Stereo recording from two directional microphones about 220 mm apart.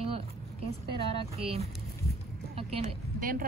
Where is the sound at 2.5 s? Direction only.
25° right (ahead or behind).